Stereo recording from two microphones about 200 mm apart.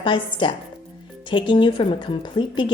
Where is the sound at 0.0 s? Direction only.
25° left (ahead or behind).